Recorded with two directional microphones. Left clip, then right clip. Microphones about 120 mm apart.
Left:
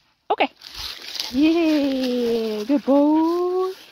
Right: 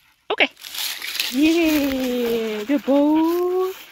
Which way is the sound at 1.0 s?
45° right (ahead or behind).